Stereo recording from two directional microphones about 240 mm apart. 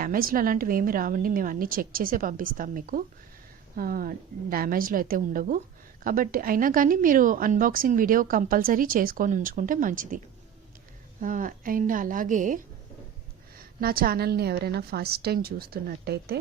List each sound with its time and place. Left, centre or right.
0.0 s a woman's voice: right
11.2 s a woman's voice: right